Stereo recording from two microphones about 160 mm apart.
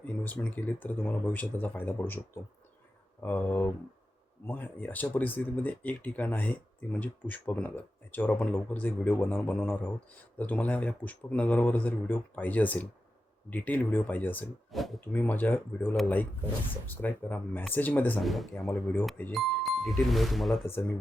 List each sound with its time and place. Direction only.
0.0 s speech: 10° left (ahead or behind)
14.7 s speech: centre (ahead or behind)
15.0 s speech: 10° left (ahead or behind)